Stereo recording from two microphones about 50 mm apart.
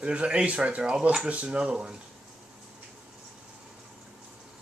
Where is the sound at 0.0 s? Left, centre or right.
Right.